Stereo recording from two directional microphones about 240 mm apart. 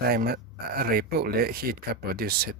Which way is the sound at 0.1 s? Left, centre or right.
Right.